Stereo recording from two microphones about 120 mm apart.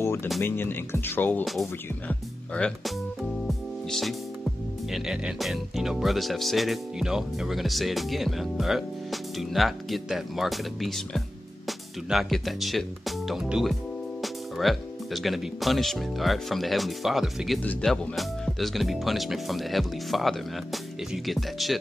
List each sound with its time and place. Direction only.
0.0 s music: 20° left (ahead or behind)
0.4 s speech: 20° left (ahead or behind)
1.4 s speech: centre (ahead or behind)
3.4 s music: centre (ahead or behind)
4.9 s speech: 5° right (ahead or behind)